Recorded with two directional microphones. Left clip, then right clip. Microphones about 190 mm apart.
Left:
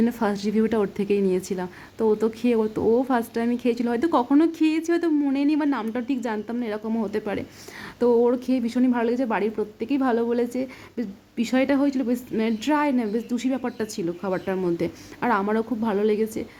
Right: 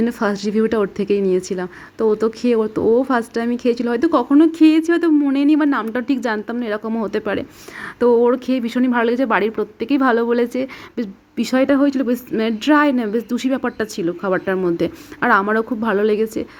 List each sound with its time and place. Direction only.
0.0 s a woman's voice: 10° right (ahead or behind)